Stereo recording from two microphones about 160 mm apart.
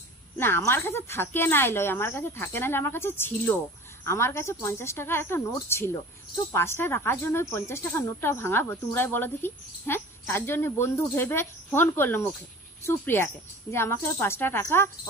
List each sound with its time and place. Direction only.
0.4 s speech: 15° left (ahead or behind)